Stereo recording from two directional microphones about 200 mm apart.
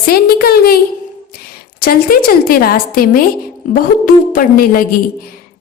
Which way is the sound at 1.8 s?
45° left (ahead or behind).